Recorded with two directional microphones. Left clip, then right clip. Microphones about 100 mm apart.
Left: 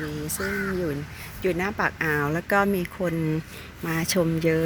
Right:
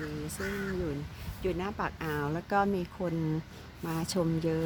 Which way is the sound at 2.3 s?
5° left (ahead or behind).